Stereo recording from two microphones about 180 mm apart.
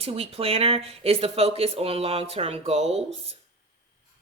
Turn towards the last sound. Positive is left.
turn(degrees=-35)  # may be behind; listen again after turning